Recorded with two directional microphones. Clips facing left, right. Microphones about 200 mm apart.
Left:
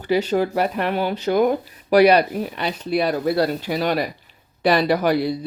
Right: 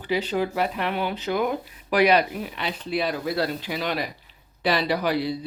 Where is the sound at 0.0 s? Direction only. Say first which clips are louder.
Left 5 dB; 45° left (ahead or behind).